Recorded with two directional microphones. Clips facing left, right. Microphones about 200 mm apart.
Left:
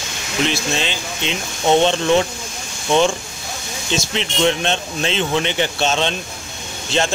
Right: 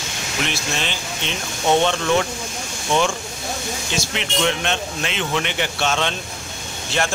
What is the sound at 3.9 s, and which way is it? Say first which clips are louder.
Speech: left 4 dB; 30° left (ahead or behind).